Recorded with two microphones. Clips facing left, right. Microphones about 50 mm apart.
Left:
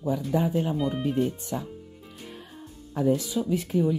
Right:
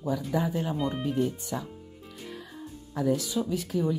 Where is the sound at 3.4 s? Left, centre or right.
Left.